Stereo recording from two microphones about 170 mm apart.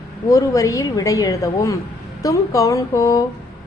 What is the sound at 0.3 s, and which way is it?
A woman's voice, 20° left (ahead or behind).